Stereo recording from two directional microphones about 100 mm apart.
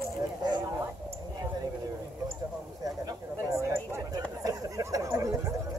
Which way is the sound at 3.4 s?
35° right (ahead or behind).